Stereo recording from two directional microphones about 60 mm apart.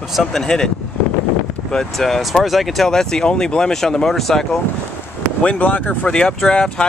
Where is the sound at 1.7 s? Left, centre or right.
Centre.